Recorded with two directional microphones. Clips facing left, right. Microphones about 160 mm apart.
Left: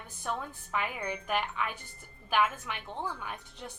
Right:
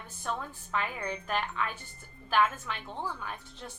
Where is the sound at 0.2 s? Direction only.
15° left (ahead or behind).